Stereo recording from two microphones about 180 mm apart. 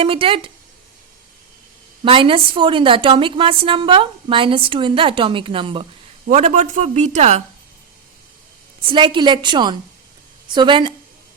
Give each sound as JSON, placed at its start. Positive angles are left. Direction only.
{"t": 0.0, "sound": "a woman's voice", "side_deg": -30}
{"t": 2.0, "sound": "a woman's voice", "side_deg": -30}
{"t": 6.2, "sound": "speech", "side_deg": -40}
{"t": 8.8, "sound": "a woman's voice", "side_deg": -30}